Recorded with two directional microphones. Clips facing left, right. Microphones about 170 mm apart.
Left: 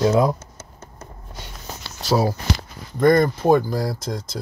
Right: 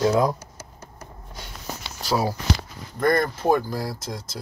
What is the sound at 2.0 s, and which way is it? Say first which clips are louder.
Speech: left 3 dB; 25° left (ahead or behind).